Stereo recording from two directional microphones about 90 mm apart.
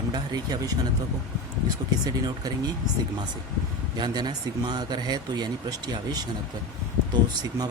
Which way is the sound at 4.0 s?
55° right (ahead or behind).